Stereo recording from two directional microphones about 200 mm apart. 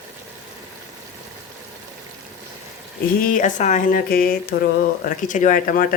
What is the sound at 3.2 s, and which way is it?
Speech, 40° left (ahead or behind).